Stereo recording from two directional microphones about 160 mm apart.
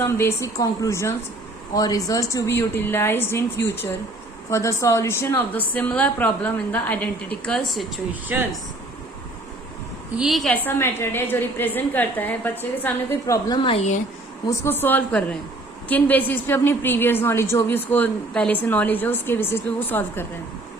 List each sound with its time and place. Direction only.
0.0 s a woman's voice: 15° left (ahead or behind)
4.4 s a woman's voice: 20° left (ahead or behind); by 7.9 s centre (ahead or behind)
8.3 s speech: 10° right (ahead or behind)
10.2 s a woman's voice: centre (ahead or behind)
10.5 s a woman's voice: 15° left (ahead or behind)
13.6 s speech: 35° left (ahead or behind)
14.6 s a woman's voice: 15° left (ahead or behind)